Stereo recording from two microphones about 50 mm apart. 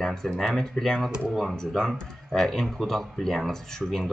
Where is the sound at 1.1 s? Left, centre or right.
Centre.